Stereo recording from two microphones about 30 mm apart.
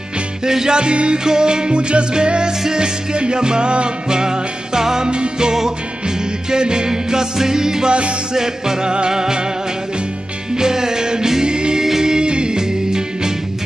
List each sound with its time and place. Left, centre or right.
0.5 s music: centre
0.7 s music: right
4.1 s music: right
5.1 s music: right
6.5 s music: right
10.5 s music: right
11.4 s music: right
11.8 s music: centre